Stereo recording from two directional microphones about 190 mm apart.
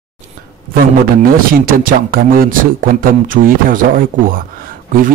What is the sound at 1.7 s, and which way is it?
Speech, 50° right (ahead or behind).